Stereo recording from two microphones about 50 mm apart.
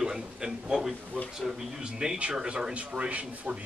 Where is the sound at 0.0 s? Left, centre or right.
Centre.